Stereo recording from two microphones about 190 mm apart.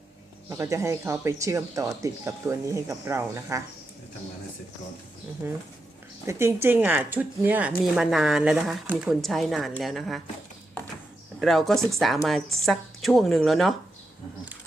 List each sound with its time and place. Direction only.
0.5 s speech: 15° right (ahead or behind)
5.4 s a woman's voice: 15° right (ahead or behind)
11.3 s a woman's voice: centre (ahead or behind)